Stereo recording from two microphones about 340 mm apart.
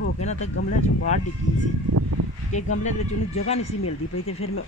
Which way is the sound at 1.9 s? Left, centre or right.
Right.